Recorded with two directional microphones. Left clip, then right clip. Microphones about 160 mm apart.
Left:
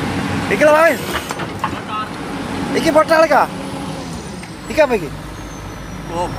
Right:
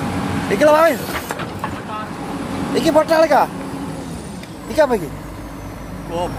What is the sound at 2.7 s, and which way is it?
Speech, 20° right (ahead or behind).